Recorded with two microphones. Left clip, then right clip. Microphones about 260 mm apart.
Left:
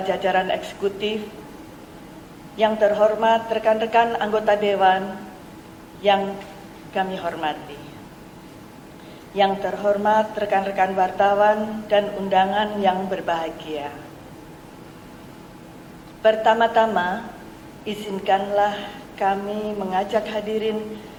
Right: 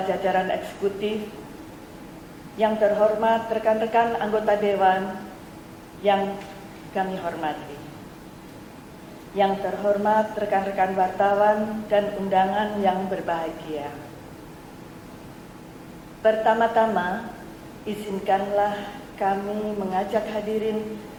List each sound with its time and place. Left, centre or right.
0.1 s a woman's voice: centre
2.6 s a woman's voice: centre
9.3 s a woman's voice: centre
16.2 s a woman's voice: centre
19.5 s a woman's voice: left
19.9 s a woman's voice: centre